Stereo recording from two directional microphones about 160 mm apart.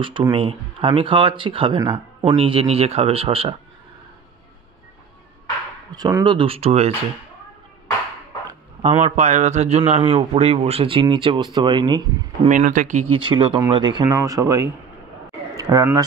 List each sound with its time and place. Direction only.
0.0 s a man's voice: 30° right (ahead or behind)
5.9 s a man's voice: 25° right (ahead or behind); by 6.9 s 40° right (ahead or behind)
8.8 s a man's voice: 40° right (ahead or behind)
12.4 s speech: 55° right (ahead or behind)
13.1 s speech: 30° right (ahead or behind)
14.0 s speech: 20° right (ahead or behind)
15.5 s a sound: 20° right (ahead or behind)